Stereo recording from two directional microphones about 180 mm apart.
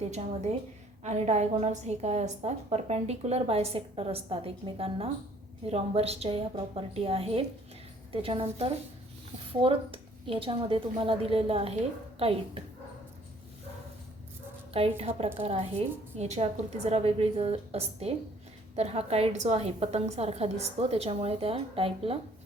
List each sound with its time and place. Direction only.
1.0 s a woman's voice: 40° right (ahead or behind)
14.7 s a woman's voice: 30° right (ahead or behind)